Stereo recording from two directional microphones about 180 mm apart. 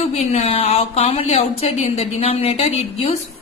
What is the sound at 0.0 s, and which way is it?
A woman's voice, 35° left (ahead or behind).